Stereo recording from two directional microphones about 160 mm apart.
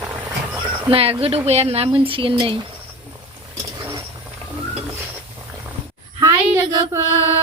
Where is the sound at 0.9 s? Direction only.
35° right (ahead or behind).